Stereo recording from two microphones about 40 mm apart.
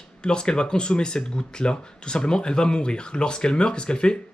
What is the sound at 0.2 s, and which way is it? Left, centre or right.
Speech, left.